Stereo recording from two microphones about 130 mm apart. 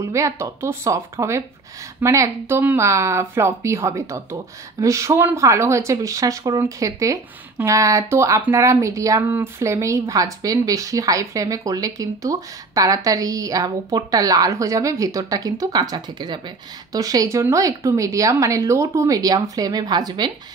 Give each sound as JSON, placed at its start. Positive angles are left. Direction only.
{"t": 0.0, "sound": "speech", "side_deg": -25}